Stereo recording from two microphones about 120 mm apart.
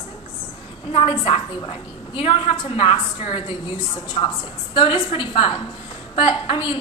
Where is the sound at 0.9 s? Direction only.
50° left (ahead or behind).